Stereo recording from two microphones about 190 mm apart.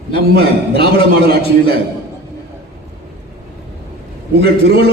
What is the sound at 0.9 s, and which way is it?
Speech, 55° right (ahead or behind).